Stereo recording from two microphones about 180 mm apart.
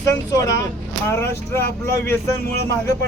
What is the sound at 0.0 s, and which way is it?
Speech, 20° left (ahead or behind).